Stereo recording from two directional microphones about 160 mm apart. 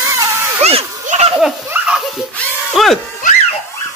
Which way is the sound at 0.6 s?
40° right (ahead or behind).